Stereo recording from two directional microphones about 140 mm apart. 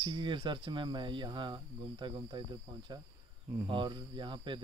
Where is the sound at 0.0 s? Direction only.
35° right (ahead or behind).